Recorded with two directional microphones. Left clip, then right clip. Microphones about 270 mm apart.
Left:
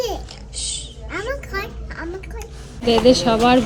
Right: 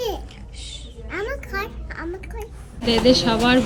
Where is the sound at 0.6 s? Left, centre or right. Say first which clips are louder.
Left 8 dB; centre.